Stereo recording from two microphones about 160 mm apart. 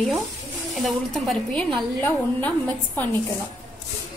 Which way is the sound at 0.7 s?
Centre (ahead or behind).